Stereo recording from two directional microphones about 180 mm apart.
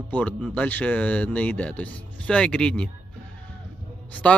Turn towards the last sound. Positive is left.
turn(degrees=10)  # may be behind; listen again after turning